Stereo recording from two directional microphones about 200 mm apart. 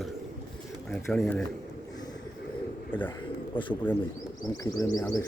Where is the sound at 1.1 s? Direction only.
5° left (ahead or behind).